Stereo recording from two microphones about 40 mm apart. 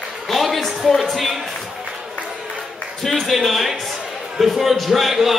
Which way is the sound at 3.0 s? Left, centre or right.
Centre.